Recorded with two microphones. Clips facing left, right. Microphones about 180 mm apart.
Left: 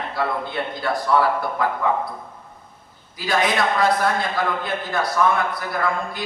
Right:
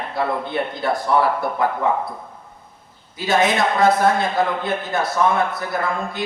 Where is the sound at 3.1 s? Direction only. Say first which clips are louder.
Right 3 dB; 25° right (ahead or behind).